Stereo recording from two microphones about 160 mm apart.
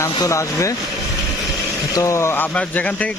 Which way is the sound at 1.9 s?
20° left (ahead or behind).